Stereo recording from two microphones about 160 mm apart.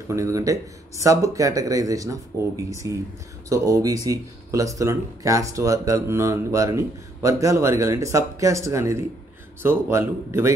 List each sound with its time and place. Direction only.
0.1 s speech: 20° right (ahead or behind)